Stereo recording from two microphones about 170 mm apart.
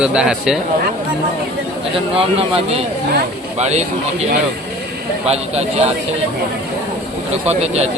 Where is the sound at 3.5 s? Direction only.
40° right (ahead or behind).